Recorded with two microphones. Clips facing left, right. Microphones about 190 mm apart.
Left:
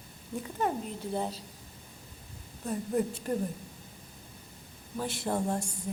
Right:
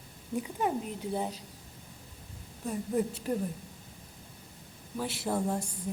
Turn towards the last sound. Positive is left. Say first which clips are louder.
# even
turn(degrees=-5)  # may be behind; listen again after turning